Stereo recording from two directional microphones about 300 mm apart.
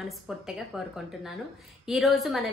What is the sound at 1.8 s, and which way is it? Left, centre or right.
Speech, centre.